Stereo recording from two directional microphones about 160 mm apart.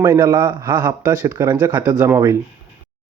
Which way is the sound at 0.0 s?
15° right (ahead or behind).